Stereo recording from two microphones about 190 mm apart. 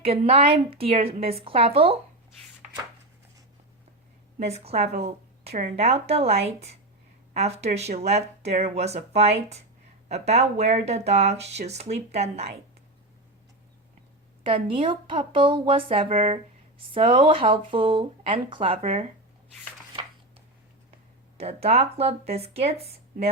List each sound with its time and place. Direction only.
0.0 s speech: 30° right (ahead or behind)
4.4 s a woman's voice: 35° right (ahead or behind)
14.4 s speech: 25° right (ahead or behind)
21.3 s speech: 30° right (ahead or behind)